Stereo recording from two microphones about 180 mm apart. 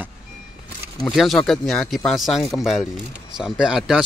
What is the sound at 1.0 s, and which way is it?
Speech, centre (ahead or behind).